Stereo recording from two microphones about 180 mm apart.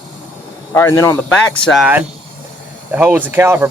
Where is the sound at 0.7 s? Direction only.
15° left (ahead or behind).